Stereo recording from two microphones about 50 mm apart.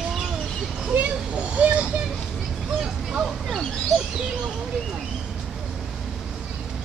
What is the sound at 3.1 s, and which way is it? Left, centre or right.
Hubbub, centre.